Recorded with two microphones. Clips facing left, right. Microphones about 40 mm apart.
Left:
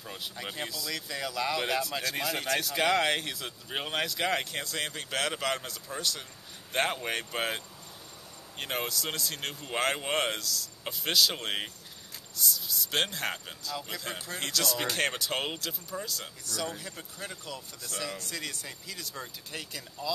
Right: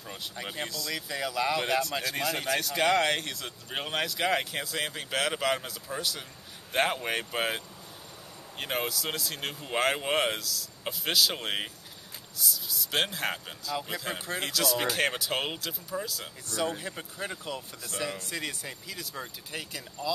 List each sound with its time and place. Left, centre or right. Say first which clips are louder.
0.0 s speech: right 1 dB; centre
16.4 s speech: right 5 dB; right; by 20.1 s centre